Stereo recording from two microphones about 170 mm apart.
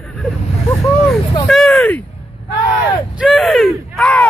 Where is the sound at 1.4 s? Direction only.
5° left (ahead or behind).